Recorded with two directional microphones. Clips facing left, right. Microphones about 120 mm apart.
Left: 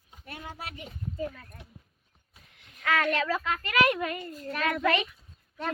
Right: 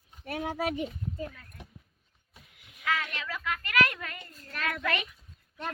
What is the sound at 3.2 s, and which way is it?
A woman's voice, 30° left (ahead or behind).